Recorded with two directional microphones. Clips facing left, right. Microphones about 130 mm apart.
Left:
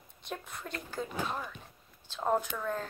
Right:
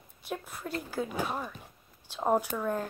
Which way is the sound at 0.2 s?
5° right (ahead or behind).